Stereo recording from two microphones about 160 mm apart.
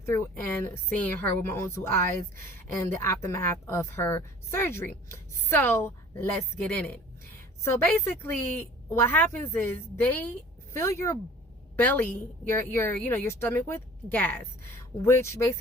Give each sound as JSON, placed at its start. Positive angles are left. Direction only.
{"t": 0.0, "sound": "a woman's voice", "side_deg": 15}